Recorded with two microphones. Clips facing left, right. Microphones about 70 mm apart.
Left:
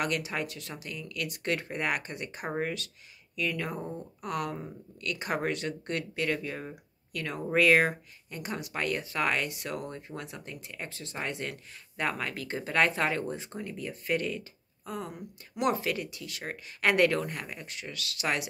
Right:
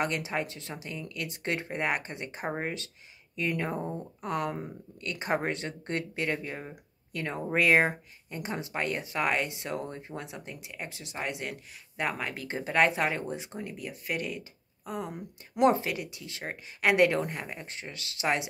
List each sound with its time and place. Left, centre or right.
0.0 s speech: right